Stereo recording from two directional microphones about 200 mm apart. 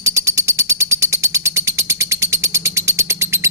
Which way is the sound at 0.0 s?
15° right (ahead or behind).